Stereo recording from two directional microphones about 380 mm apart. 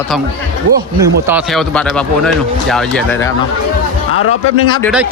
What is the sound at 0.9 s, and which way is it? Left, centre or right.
Speech, centre.